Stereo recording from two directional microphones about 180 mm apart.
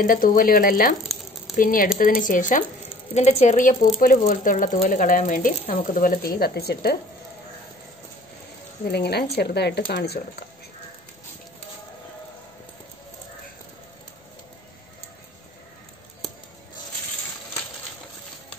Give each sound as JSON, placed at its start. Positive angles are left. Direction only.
{"t": 0.0, "sound": "a woman's voice", "side_deg": 50}
{"t": 8.9, "sound": "speech", "side_deg": 65}